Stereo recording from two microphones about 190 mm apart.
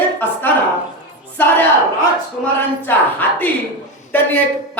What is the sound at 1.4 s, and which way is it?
Speech, 10° left (ahead or behind).